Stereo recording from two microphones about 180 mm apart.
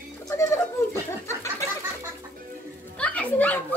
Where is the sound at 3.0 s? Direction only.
5° left (ahead or behind).